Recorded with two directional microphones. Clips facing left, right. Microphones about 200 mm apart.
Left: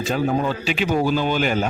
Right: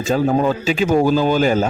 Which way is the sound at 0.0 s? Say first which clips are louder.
Right 5 dB; 45° right (ahead or behind).